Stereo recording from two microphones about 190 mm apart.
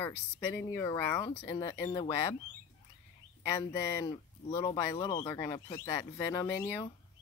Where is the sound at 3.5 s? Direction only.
20° left (ahead or behind).